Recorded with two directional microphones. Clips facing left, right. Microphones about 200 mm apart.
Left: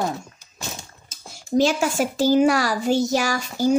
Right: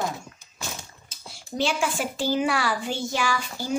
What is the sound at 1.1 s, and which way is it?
A child's voice, 45° left (ahead or behind).